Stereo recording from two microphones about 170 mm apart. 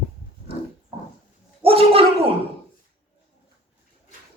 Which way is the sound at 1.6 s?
35° right (ahead or behind).